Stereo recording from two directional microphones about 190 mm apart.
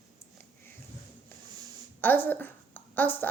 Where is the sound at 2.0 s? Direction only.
10° left (ahead or behind).